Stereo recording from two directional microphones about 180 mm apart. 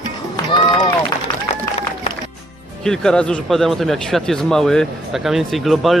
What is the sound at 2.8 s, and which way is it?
Speech, 5° left (ahead or behind).